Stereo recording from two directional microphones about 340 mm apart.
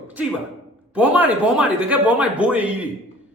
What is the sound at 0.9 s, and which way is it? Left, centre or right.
Speech, centre.